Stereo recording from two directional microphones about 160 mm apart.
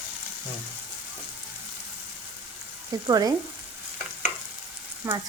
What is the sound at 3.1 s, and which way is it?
Speech, 20° right (ahead or behind).